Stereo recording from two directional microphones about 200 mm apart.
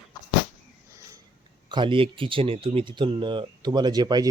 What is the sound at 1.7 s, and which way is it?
Speech, 25° right (ahead or behind).